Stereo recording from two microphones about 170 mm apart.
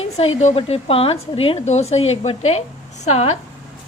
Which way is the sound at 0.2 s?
40° left (ahead or behind).